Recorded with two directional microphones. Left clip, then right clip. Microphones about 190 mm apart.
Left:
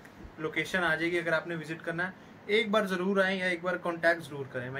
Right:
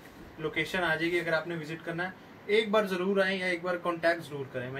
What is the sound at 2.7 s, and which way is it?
A man's voice, centre (ahead or behind).